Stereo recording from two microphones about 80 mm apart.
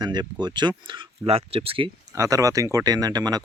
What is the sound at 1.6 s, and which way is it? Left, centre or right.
Speech, right.